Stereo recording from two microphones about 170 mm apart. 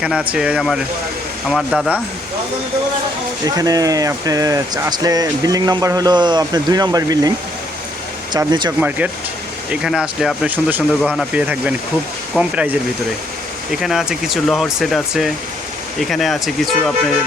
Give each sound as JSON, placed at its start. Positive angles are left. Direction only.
{"t": 0.0, "sound": "speech", "side_deg": -5}
{"t": 3.4, "sound": "speech", "side_deg": -20}
{"t": 9.8, "sound": "speech", "side_deg": -5}